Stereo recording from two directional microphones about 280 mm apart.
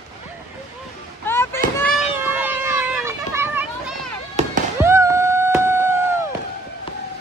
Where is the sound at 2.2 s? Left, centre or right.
Centre.